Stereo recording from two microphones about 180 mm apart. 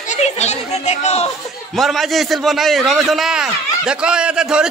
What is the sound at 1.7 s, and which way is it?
A man's voice, centre (ahead or behind).